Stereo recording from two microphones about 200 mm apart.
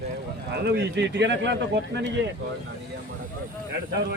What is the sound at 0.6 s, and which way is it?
Speech, 55° right (ahead or behind).